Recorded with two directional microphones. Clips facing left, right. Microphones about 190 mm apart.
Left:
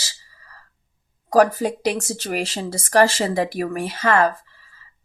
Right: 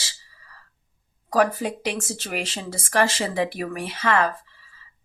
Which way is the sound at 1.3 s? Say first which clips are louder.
Left 5 dB; 40° left (ahead or behind).